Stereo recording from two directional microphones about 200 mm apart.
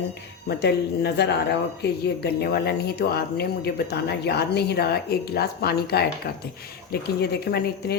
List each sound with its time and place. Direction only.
0.4 s speech: 55° left (ahead or behind)